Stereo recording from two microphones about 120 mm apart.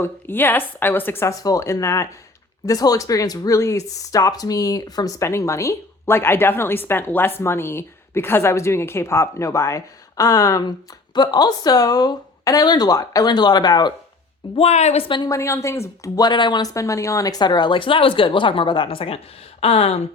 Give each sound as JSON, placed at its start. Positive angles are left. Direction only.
{"t": 0.0, "sound": "speech", "side_deg": 20}
{"t": 14.5, "sound": "a woman's voice", "side_deg": 60}
{"t": 15.0, "sound": "speech", "side_deg": 40}
{"t": 15.3, "sound": "speech", "side_deg": 25}